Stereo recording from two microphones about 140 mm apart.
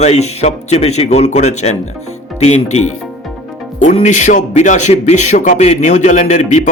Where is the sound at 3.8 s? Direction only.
60° left (ahead or behind).